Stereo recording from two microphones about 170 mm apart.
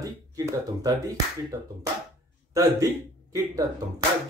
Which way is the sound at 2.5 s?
20° right (ahead or behind).